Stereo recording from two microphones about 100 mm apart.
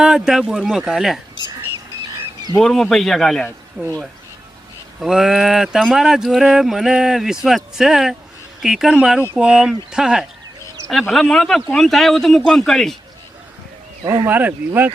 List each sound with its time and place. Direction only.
0.0 s speech: 5° right (ahead or behind)
2.6 s speech: 5° left (ahead or behind)
3.8 s speech: 15° right (ahead or behind)
4.9 s speech: 5° right (ahead or behind)
14.0 s speech: 45° right (ahead or behind)
14.3 s speech: 20° right (ahead or behind)